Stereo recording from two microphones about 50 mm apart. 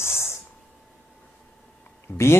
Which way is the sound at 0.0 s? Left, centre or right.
Left.